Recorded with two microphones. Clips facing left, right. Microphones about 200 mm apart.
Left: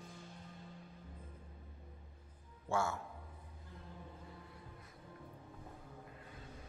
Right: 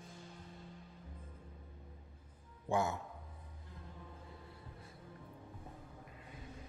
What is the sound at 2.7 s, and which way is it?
Speech, 20° right (ahead or behind).